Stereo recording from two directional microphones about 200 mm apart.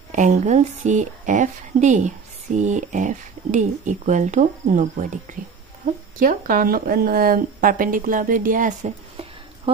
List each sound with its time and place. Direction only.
0.1 s speech: 35° right (ahead or behind)